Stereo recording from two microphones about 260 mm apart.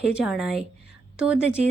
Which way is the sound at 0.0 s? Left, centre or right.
Centre.